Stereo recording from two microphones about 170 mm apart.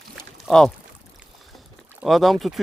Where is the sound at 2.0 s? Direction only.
Centre (ahead or behind).